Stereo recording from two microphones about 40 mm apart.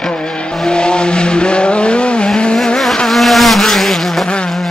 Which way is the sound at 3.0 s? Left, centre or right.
Centre.